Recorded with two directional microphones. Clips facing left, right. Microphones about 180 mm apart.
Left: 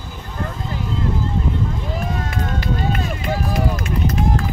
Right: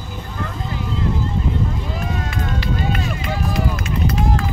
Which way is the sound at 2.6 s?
45° left (ahead or behind).